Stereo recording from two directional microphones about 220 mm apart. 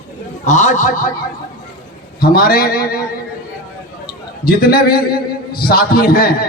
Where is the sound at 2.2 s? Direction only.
40° left (ahead or behind).